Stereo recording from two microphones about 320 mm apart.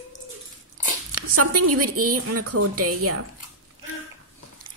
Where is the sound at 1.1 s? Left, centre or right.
Right.